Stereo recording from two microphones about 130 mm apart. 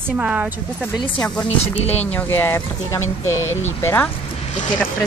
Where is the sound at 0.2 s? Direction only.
10° right (ahead or behind).